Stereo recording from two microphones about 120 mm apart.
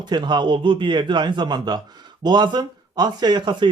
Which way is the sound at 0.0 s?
40° right (ahead or behind).